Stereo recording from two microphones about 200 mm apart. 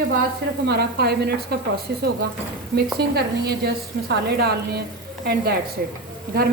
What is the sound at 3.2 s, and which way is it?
A man's voice, 50° right (ahead or behind).